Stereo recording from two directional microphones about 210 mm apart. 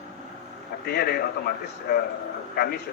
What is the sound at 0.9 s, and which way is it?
A man's voice, 50° left (ahead or behind).